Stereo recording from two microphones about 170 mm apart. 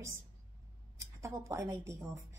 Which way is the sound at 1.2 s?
15° right (ahead or behind).